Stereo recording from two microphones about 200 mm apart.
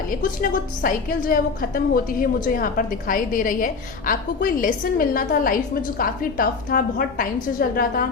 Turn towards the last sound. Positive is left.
turn(degrees=45)  # may be behind; listen again after turning